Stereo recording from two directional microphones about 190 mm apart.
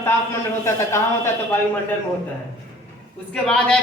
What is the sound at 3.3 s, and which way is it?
Speech, 5° left (ahead or behind).